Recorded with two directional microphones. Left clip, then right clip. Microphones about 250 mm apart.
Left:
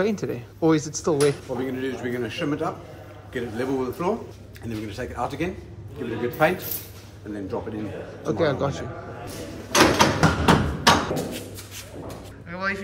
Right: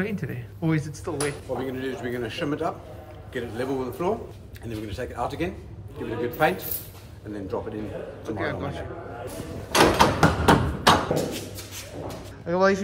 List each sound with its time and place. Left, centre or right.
0.0 s speech: centre
1.6 s a man's voice: centre
8.4 s speech: centre
9.7 s door: centre
12.4 s speech: centre